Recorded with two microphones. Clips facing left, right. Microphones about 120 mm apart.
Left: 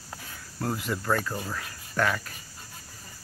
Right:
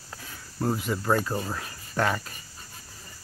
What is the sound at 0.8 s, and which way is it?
Speech, 15° right (ahead or behind).